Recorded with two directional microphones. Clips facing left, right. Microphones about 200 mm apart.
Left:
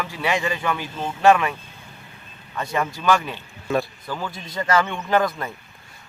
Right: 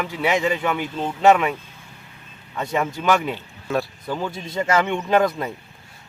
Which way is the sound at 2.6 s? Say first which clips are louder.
Right 2 dB; 20° right (ahead or behind).